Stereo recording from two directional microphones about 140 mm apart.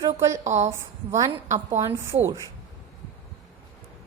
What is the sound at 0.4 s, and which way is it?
Speech, 55° right (ahead or behind).